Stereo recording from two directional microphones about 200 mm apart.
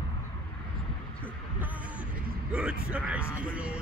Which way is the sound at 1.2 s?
10° right (ahead or behind).